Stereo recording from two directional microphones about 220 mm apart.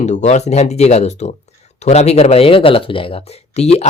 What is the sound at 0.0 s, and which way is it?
Speech, 30° left (ahead or behind).